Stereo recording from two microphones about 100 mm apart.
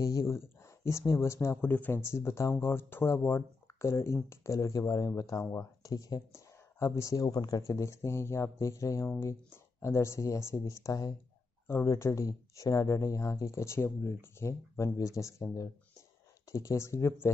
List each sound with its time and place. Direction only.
0.0 s speech: 35° left (ahead or behind)